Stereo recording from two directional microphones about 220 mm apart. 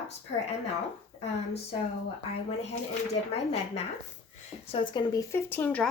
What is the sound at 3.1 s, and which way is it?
Speech, 30° left (ahead or behind).